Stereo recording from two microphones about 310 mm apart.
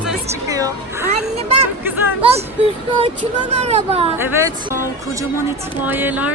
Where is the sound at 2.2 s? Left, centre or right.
Centre.